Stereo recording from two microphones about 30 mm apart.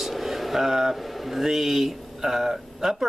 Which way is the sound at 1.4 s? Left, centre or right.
Centre.